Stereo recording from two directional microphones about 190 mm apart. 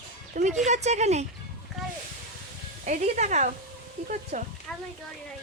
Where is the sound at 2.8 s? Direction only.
35° right (ahead or behind).